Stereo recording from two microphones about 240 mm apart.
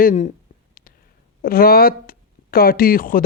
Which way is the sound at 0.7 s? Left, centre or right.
Left.